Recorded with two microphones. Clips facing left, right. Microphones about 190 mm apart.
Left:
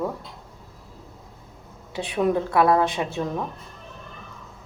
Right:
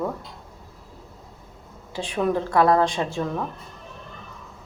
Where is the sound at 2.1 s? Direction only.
15° left (ahead or behind).